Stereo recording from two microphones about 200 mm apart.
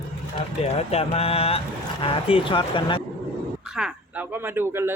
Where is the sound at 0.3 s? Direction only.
30° left (ahead or behind).